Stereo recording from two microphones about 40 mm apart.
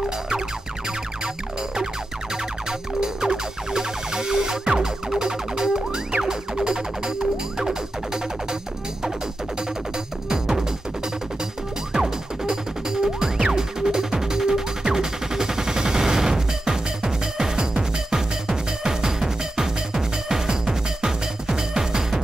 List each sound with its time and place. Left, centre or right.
3.0 s music: centre
10.3 s music: centre
11.9 s music: centre